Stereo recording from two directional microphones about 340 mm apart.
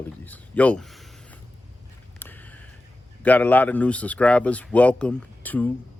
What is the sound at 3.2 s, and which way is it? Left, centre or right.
Speech, centre.